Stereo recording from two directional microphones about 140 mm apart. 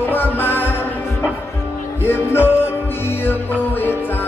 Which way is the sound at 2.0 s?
15° left (ahead or behind).